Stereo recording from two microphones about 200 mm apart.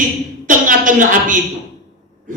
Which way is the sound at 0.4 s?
40° right (ahead or behind).